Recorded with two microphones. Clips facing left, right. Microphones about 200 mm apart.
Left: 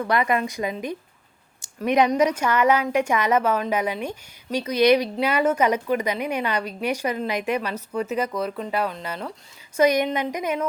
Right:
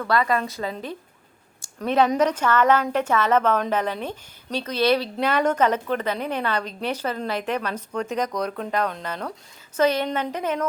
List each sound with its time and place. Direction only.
0.0 s a woman's voice: 20° left (ahead or behind)
1.6 s a sound: 15° left (ahead or behind)
2.1 s a woman's voice: 10° left (ahead or behind)